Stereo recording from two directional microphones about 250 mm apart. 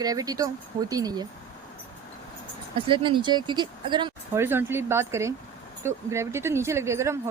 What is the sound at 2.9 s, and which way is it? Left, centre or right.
Speech, centre.